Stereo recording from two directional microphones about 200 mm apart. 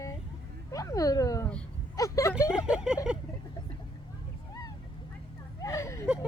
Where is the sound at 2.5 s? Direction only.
5° right (ahead or behind).